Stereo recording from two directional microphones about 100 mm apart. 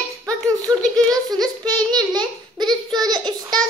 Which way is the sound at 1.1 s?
40° right (ahead or behind).